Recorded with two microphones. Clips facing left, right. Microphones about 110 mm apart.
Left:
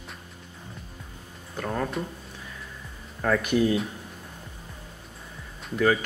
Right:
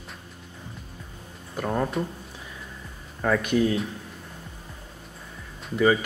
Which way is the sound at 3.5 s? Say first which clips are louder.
Left 1 dB; 5° left (ahead or behind).